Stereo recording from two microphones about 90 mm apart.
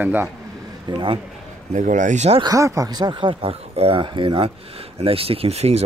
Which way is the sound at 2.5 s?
35° right (ahead or behind).